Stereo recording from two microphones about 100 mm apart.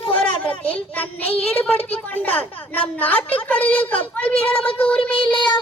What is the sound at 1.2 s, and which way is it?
Speech, 80° left.